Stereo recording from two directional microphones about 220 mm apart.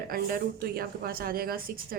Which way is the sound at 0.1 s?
40° right (ahead or behind).